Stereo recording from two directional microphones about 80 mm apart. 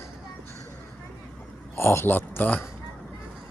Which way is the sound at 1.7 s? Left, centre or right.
Left.